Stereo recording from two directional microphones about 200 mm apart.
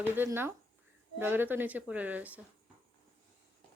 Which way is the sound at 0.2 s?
10° right (ahead or behind).